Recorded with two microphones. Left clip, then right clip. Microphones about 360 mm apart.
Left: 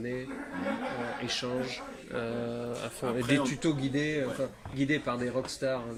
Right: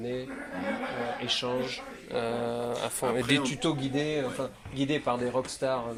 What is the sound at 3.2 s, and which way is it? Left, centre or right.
Speech, centre.